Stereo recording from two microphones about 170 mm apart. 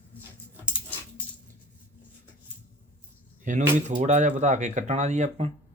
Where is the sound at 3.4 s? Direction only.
50° right (ahead or behind).